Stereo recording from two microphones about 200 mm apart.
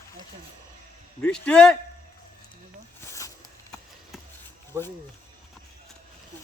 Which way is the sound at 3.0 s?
15° left (ahead or behind).